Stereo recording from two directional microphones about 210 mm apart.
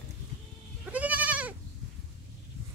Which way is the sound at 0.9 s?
5° right (ahead or behind).